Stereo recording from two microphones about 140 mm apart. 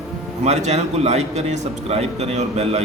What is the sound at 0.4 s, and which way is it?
A man's voice, 50° right (ahead or behind).